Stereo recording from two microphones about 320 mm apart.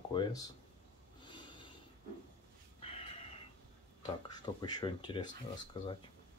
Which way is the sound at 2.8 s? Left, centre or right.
Centre.